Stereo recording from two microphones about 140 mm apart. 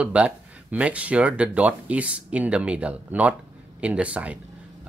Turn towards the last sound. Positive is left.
turn(degrees=-10)  # may be behind; listen again after turning